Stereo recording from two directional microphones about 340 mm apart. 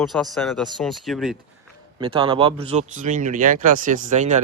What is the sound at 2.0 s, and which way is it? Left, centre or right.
Speech, centre.